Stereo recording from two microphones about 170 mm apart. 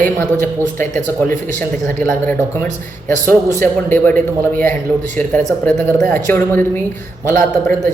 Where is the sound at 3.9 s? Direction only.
10° left (ahead or behind).